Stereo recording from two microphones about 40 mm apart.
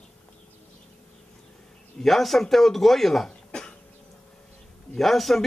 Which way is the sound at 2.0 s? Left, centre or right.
Centre.